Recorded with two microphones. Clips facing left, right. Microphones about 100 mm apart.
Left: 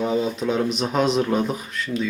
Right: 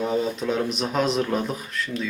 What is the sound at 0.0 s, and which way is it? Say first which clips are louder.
Speech: left 2 dB; centre (ahead or behind).